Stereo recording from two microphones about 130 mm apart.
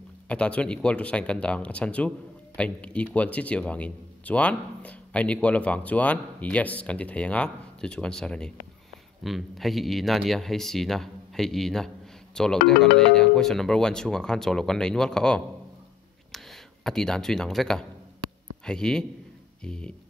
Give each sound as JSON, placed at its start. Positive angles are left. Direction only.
{"t": 0.3, "sound": "speech", "side_deg": 10}